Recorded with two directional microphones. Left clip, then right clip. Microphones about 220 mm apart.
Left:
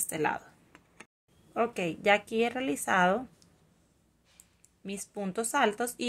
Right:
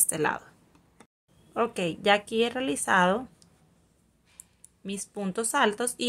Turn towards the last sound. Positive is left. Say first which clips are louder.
# right 3 dB
turn(degrees=-5)  # may be behind; listen again after turning